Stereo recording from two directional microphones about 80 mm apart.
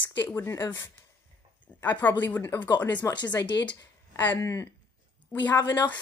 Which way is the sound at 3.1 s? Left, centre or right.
Left.